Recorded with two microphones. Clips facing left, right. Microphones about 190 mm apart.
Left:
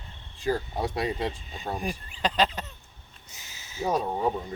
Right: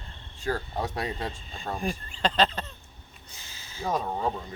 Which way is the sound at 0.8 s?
10° left (ahead or behind).